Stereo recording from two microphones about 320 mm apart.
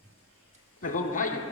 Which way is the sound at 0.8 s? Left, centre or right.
Left.